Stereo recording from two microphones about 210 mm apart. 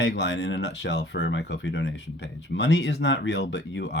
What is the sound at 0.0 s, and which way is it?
Speech, 60° left (ahead or behind).